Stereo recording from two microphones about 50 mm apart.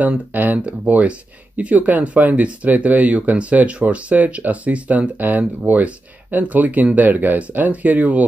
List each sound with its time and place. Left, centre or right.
0.3 s speech: right